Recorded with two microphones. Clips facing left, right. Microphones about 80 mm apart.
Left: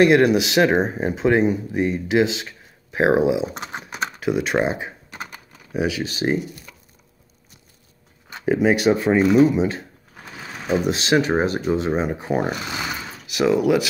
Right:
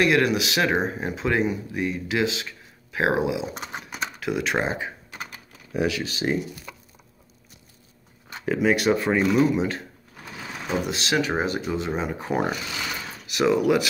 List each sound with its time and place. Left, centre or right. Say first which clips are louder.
0.0 s speech: left 6 dB; left
3.6 s speech: left 4 dB; centre
4.6 s typing: left 3 dB; left
8.6 s speech: left 3 dB; centre
11.0 s speech: left 4 dB; left
12.6 s a sound: left 4 dB; left
13.3 s speech: left 2 dB; centre